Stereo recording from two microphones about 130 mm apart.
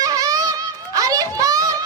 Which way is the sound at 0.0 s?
25° right (ahead or behind).